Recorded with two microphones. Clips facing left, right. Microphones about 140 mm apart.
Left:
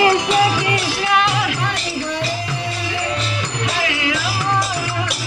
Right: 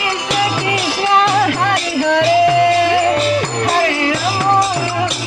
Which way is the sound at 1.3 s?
50° right (ahead or behind).